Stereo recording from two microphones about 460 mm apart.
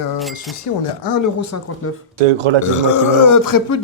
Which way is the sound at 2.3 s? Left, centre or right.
Right.